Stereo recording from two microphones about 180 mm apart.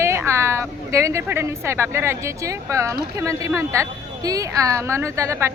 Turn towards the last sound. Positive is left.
turn(degrees=-15)  # may be behind; listen again after turning